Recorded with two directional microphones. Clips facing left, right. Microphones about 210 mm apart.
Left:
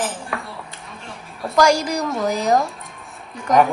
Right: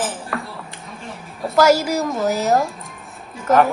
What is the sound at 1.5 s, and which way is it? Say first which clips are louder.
A woman's voice: right 2 dB; 5° right (ahead or behind).